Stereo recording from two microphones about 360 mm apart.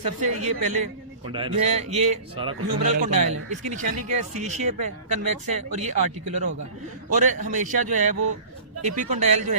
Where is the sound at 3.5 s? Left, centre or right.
Centre.